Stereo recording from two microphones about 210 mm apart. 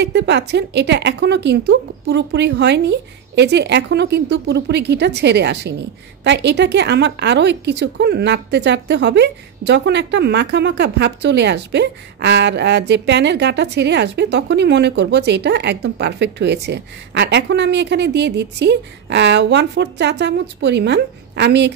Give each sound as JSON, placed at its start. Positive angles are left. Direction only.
{"t": 0.0, "sound": "a woman's voice", "side_deg": -55}